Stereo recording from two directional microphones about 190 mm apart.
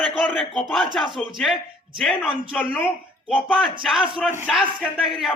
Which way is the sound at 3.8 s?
Centre (ahead or behind).